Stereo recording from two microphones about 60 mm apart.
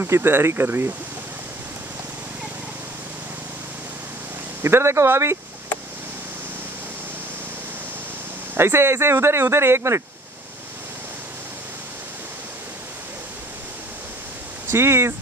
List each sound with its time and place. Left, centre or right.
0.0 s speech: right
4.6 s speech: right
8.5 s speech: right
14.7 s speech: right